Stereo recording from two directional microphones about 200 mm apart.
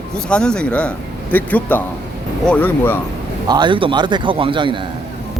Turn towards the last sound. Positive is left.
turn(degrees=-25)  # may be behind; listen again after turning